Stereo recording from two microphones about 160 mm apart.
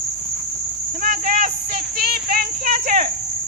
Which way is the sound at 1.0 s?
55° right (ahead or behind).